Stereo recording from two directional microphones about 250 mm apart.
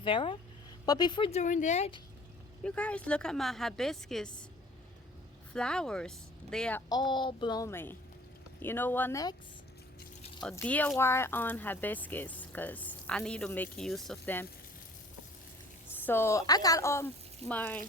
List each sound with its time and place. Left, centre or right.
0.0 s speech: centre
2.6 s speech: centre
5.5 s speech: centre
10.4 s speech: centre
16.0 s speech: centre